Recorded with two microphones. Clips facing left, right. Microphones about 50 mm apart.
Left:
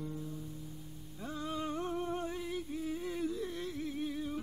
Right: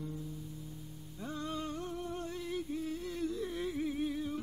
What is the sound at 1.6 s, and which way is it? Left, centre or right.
Humming, left.